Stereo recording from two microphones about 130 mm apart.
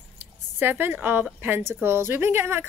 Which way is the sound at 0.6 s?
15° right (ahead or behind).